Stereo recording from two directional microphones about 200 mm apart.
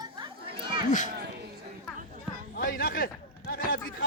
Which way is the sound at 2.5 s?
45° left (ahead or behind).